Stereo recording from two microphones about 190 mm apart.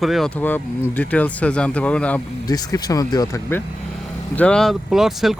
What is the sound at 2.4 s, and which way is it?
Speech, 20° left (ahead or behind).